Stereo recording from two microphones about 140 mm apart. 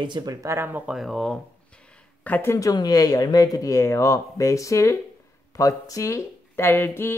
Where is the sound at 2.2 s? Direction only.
15° left (ahead or behind).